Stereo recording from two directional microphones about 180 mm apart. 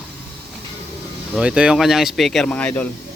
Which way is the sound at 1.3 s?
5° right (ahead or behind).